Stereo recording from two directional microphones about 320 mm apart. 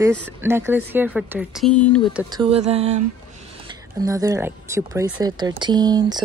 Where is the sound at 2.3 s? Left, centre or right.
Centre.